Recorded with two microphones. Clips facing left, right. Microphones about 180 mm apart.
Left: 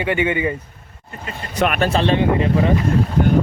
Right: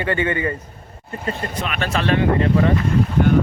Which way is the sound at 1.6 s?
55° left (ahead or behind).